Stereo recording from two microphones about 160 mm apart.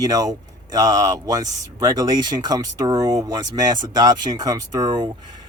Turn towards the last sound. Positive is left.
turn(degrees=-25)  # may be behind; listen again after turning